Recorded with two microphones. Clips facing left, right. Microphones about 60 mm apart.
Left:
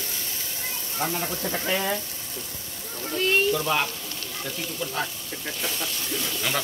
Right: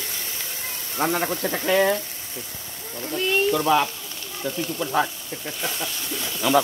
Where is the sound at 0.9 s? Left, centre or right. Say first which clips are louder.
Right 6 dB; right.